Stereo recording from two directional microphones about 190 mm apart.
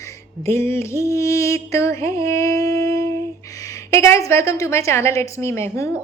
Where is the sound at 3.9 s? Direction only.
15° left (ahead or behind).